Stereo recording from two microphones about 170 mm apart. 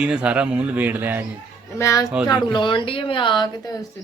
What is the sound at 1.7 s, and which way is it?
Speech, 20° left (ahead or behind).